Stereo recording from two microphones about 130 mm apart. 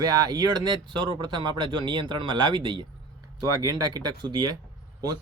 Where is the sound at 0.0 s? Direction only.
30° right (ahead or behind).